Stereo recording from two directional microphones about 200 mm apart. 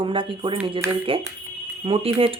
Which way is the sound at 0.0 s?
25° right (ahead or behind).